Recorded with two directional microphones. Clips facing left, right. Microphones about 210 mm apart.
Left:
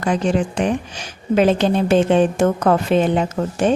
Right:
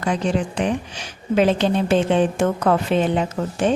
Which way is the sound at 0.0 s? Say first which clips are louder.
Left 3 dB; 50° left (ahead or behind).